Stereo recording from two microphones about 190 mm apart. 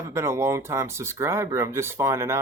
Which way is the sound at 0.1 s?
15° right (ahead or behind).